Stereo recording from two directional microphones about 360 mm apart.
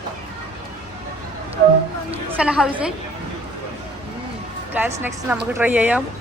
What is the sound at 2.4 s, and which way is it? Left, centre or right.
Speech, centre.